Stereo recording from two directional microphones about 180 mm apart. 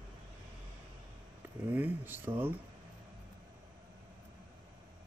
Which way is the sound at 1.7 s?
10° right (ahead or behind).